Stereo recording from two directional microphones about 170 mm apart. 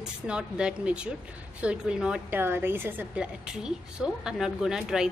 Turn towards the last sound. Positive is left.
turn(degrees=0)  # may be behind; listen again after turning